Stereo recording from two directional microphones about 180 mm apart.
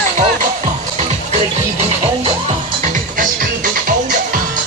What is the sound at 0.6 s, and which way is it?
Music, 35° right (ahead or behind).